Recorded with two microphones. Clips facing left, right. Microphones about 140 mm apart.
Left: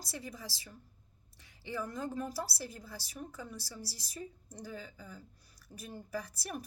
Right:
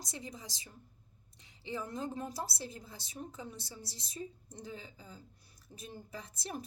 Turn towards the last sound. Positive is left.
turn(degrees=-25)  # may be behind; listen again after turning